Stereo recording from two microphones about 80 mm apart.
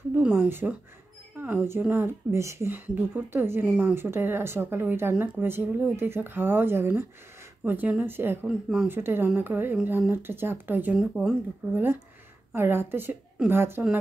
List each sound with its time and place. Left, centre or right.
0.1 s a woman's voice: centre
0.5 s speech: right
2.0 s speech: right
2.9 s speech: right
3.6 s speech: centre
3.9 s speech: right
5.1 s speech: centre
8.5 s speech: centre
8.8 s speech: right